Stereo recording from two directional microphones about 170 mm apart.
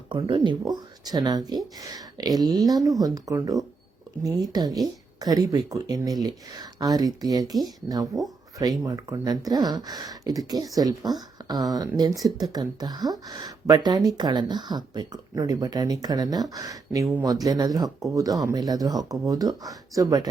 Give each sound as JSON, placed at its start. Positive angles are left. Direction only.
{"t": 0.1, "sound": "a woman's voice", "side_deg": -30}